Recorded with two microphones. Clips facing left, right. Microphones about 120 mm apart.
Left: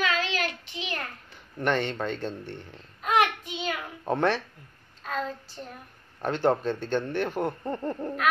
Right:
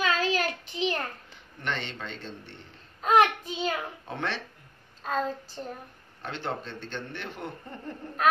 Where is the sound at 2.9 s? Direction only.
35° right (ahead or behind).